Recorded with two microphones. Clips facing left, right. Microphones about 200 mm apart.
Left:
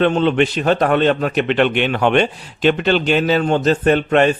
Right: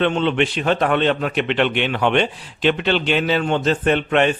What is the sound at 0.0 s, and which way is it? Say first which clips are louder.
A man's voice: left 4 dB; 40° left (ahead or behind).